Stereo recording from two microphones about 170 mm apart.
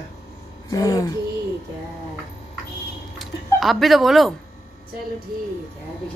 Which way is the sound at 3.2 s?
Centre (ahead or behind).